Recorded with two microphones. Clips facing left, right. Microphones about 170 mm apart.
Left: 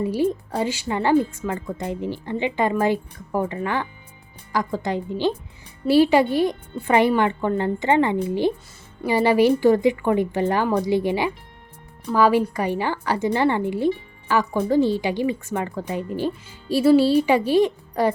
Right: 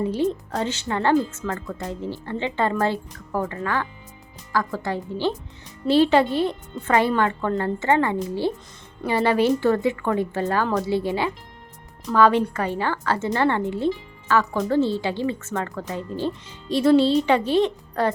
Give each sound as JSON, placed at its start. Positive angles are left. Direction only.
{"t": 0.0, "sound": "a woman's voice", "side_deg": 10}